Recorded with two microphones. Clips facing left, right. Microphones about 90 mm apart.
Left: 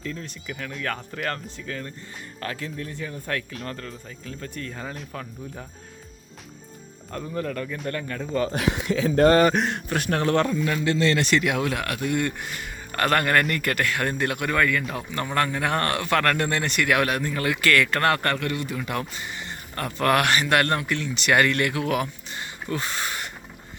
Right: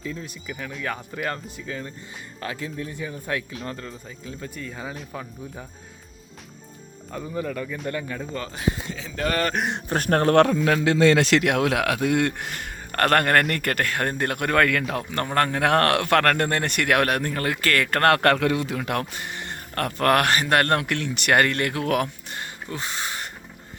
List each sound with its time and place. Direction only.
0.0 s speech: 10° right (ahead or behind)
7.1 s speech: 5° right (ahead or behind)
8.5 s speech: 80° left; by 9.3 s 50° left (ahead or behind)
9.9 s a man's voice: 45° right (ahead or behind)
10.4 s a man's voice: 75° right (ahead or behind)
14.9 s speech: 55° right (ahead or behind)
15.3 s speech: 40° right (ahead or behind)
15.5 s a man's voice: 75° right (ahead or behind); by 20.7 s 40° right (ahead or behind)
20.7 s speech: 65° right (ahead or behind)
22.7 s speech: 20° right (ahead or behind)